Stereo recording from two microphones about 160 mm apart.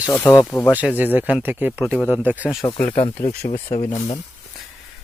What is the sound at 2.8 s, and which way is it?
Speech, 50° left (ahead or behind).